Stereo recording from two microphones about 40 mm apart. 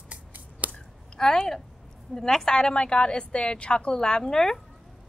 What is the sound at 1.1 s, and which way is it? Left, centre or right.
A woman's voice, centre.